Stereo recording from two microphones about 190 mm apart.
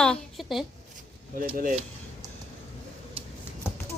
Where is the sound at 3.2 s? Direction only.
30° right (ahead or behind).